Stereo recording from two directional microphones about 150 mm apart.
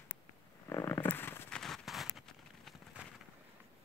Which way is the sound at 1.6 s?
Centre (ahead or behind).